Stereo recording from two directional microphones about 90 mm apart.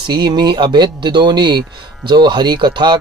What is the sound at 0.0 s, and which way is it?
Speech, 55° right (ahead or behind).